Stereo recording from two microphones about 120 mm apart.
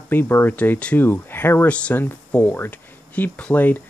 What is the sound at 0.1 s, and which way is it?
Speech, 15° left (ahead or behind).